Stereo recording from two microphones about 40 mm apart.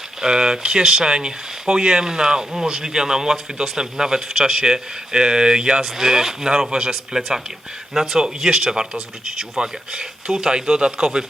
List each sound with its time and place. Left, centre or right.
0.2 s speech: centre
11.0 s speech: centre